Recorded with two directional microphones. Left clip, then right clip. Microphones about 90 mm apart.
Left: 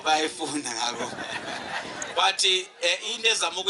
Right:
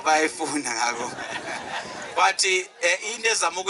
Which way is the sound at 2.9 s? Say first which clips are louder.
Right 1 dB; 40° right (ahead or behind).